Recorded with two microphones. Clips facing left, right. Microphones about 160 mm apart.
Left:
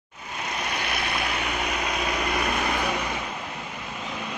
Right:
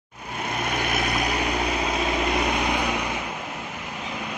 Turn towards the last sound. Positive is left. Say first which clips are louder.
# right 2 dB
turn(degrees=-15)  # may be behind; listen again after turning